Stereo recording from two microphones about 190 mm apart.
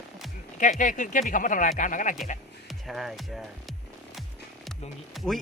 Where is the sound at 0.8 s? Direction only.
45° left (ahead or behind).